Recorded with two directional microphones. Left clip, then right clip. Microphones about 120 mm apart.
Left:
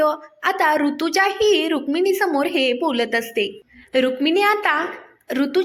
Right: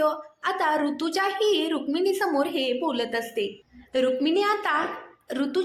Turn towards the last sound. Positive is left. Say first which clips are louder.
# left 6 dB
turn(degrees=30)  # may be behind; listen again after turning